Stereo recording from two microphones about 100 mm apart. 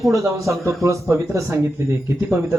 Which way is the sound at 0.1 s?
30° right (ahead or behind).